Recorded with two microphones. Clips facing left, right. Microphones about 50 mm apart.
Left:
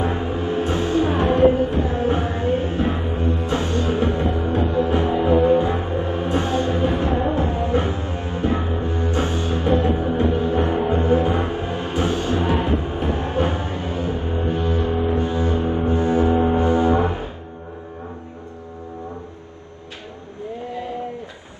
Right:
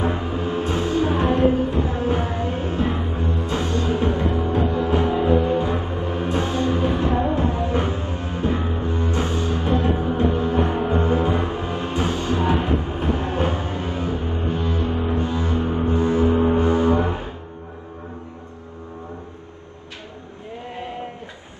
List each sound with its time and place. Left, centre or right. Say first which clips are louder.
0.1 s music: left 1 dB; left
13.8 s music: left 3 dB; right
14.1 s music: left 2 dB; left
15.1 s double bass: left 2 dB; left
16.5 s music: left 1 dB; left